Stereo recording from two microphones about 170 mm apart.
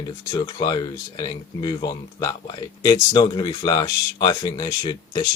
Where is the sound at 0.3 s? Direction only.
25° left (ahead or behind).